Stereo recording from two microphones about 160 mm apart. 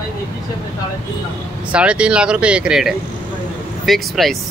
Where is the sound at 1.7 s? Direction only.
5° right (ahead or behind).